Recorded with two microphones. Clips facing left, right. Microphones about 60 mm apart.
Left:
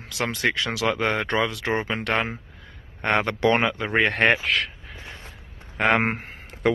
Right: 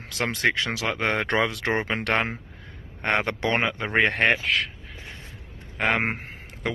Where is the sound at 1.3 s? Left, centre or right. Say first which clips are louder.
Even; right.